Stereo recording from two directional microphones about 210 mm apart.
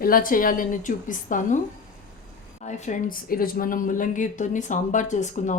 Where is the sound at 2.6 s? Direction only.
35° left (ahead or behind).